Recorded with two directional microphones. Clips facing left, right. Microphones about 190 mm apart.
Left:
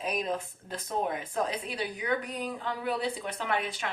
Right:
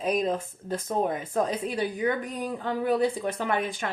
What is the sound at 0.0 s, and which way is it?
Speech, 45° right (ahead or behind).